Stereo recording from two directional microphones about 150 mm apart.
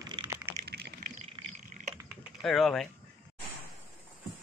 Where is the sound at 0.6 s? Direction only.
90° right.